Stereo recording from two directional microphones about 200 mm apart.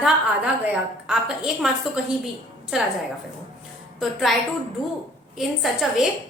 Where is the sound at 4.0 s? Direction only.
Centre (ahead or behind).